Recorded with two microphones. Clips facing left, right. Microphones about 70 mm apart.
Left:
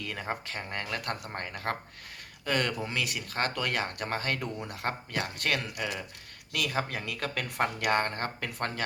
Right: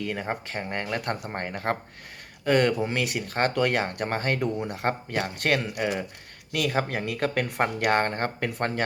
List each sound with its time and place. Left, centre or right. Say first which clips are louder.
0.0 s speech: right 5 dB; right